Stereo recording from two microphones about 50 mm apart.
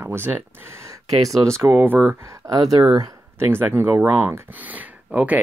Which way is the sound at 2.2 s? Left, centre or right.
Right.